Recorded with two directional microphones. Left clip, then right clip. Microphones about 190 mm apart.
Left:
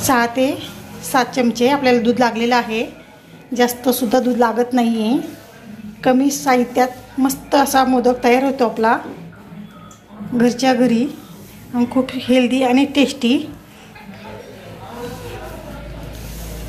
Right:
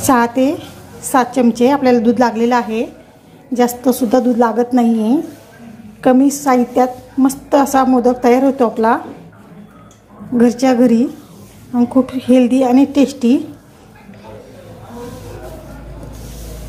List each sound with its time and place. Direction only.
0.0 s a woman's voice: 45° right (ahead or behind)
10.3 s a woman's voice: 45° right (ahead or behind)